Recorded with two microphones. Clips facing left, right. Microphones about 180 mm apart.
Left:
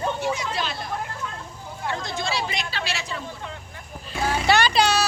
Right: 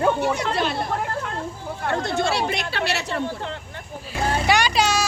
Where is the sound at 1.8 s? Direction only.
65° right (ahead or behind).